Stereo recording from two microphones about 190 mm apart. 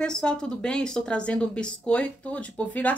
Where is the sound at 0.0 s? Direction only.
5° left (ahead or behind).